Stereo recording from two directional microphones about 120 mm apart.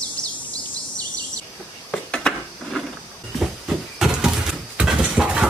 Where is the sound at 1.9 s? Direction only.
5° left (ahead or behind).